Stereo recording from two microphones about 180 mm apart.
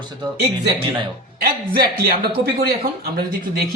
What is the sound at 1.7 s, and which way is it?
Speech, 55° right (ahead or behind).